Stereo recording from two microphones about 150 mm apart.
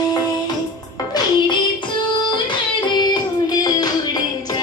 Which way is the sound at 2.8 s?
30° left (ahead or behind).